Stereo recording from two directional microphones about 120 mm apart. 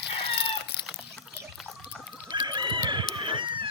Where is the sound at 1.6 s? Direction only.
Centre (ahead or behind).